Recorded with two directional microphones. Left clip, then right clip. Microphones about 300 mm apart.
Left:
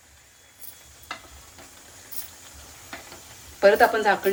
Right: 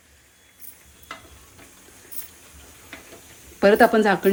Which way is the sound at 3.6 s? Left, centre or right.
Right.